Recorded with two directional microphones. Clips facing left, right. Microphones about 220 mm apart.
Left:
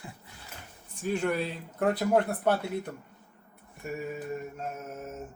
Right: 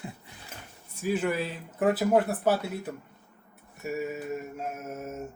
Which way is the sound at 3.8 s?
5° right (ahead or behind).